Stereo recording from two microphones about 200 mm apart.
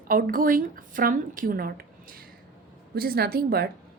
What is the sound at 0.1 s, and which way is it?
A woman's voice, 45° right (ahead or behind).